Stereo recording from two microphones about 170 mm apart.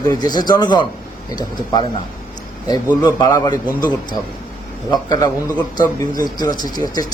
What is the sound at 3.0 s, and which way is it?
Speech, 25° left (ahead or behind).